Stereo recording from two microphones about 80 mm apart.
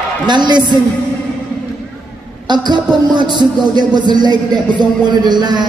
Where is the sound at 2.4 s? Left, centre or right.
Right.